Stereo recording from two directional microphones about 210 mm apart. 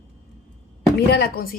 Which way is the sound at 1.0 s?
50° left (ahead or behind).